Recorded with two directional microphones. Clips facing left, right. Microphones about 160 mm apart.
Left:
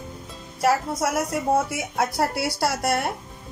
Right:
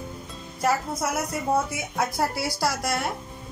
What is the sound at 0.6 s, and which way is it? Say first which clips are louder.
Speech: left 3 dB; 85° left.